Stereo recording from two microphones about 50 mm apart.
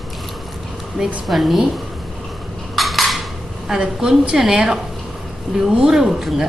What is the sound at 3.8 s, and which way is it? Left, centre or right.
A woman's voice, centre.